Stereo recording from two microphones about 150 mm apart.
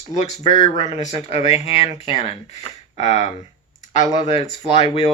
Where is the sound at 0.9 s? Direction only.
45° left (ahead or behind).